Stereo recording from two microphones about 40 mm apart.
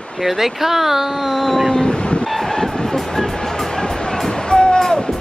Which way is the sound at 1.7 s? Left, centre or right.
Left.